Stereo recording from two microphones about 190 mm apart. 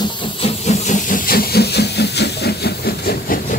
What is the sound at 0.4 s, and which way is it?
Hiss, 40° left (ahead or behind).